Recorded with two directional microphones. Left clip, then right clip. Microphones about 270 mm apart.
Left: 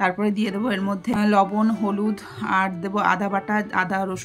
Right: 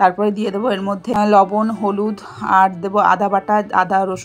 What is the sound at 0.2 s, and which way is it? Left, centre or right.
Speech, centre.